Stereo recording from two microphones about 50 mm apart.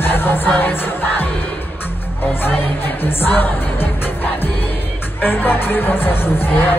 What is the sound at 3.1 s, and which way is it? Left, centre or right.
Music, left.